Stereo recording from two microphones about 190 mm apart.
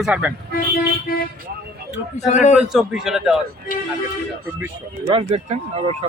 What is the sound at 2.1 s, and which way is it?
Speech, 35° left (ahead or behind).